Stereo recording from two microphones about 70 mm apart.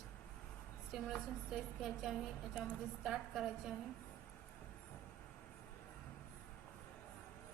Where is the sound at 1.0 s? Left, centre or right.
Centre.